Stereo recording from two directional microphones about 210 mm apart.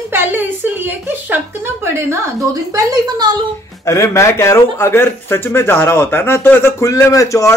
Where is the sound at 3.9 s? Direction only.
15° left (ahead or behind).